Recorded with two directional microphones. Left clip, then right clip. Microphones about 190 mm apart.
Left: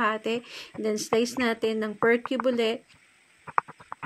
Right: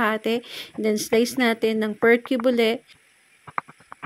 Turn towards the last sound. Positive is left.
turn(degrees=0)  # may be behind; listen again after turning